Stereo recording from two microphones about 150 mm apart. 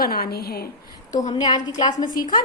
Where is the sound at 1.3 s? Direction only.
25° left (ahead or behind).